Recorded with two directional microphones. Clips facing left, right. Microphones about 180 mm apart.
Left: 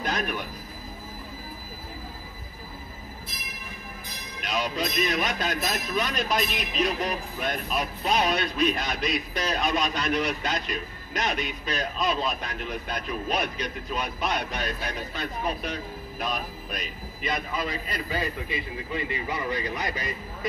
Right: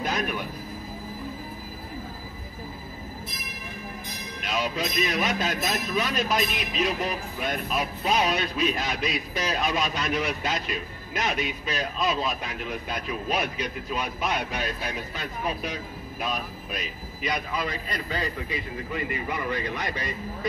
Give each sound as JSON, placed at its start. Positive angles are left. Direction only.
{"t": 0.0, "sound": "a sound", "side_deg": -5}
{"t": 4.5, "sound": "speech", "side_deg": -5}
{"t": 18.5, "sound": "speech", "side_deg": 20}